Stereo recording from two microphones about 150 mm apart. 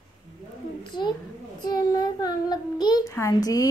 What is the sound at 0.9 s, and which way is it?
A child's voice, 30° left (ahead or behind).